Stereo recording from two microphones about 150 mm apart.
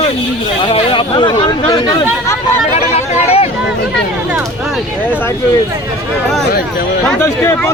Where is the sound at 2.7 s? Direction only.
45° left (ahead or behind).